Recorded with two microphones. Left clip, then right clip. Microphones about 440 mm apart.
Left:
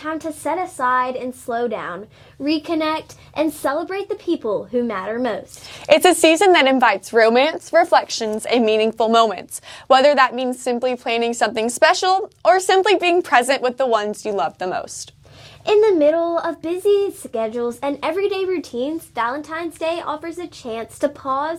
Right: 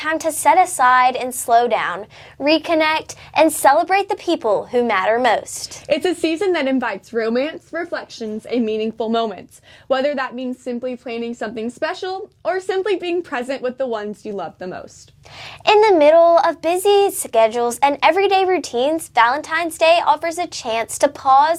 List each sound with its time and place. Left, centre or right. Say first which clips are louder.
0.0 s a woman's voice: right 8 dB; right
5.8 s a woman's voice: left 7 dB; left
15.6 s a woman's voice: right 3 dB; right